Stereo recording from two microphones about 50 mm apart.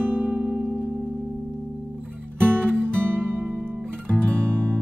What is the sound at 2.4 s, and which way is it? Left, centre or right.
Music, right.